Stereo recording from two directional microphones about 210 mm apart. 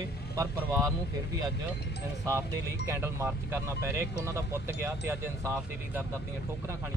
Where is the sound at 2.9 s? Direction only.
10° right (ahead or behind).